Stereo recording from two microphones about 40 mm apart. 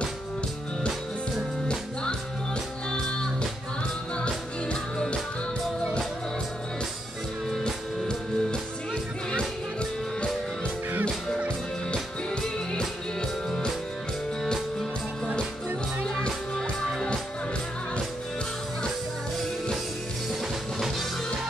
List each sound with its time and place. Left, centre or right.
7.6 s music: centre
16.2 s music: centre